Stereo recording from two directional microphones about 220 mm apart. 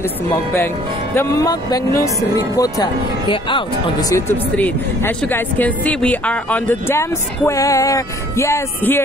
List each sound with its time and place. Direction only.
1.1 s speech: 15° left (ahead or behind)
4.1 s speech: 10° left (ahead or behind)